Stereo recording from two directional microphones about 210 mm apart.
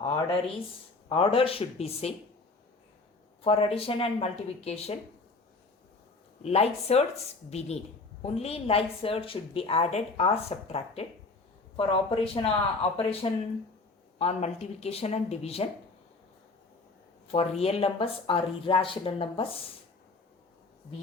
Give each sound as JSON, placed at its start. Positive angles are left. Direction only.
{"t": 0.0, "sound": "a woman's voice", "side_deg": 25}
{"t": 3.4, "sound": "a woman's voice", "side_deg": 30}
{"t": 6.4, "sound": "a woman's voice", "side_deg": 30}
{"t": 8.2, "sound": "a woman's voice", "side_deg": 30}
{"t": 17.6, "sound": "a woman's voice", "side_deg": 30}